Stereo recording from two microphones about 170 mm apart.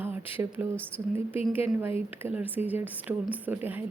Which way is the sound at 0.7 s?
10° left (ahead or behind).